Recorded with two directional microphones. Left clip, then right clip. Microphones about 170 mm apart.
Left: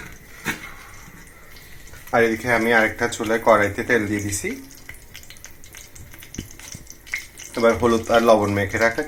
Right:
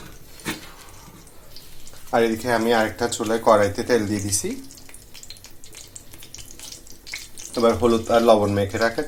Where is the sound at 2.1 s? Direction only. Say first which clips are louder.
Left 2 dB; centre (ahead or behind).